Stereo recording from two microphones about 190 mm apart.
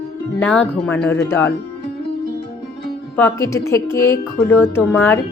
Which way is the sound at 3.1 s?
10° left (ahead or behind).